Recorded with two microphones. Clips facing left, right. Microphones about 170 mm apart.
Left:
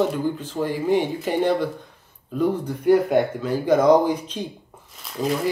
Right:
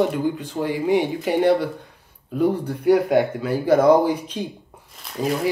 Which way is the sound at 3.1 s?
5° right (ahead or behind).